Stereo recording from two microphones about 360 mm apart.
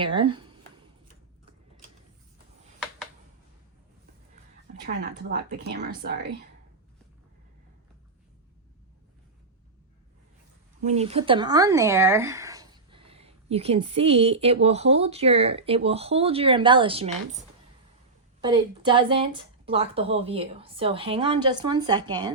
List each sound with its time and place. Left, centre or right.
0.0 s speech: centre
4.9 s speech: right
10.8 s speech: centre